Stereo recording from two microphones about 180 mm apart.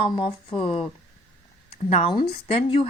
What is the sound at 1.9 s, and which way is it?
A woman's voice, 35° left (ahead or behind).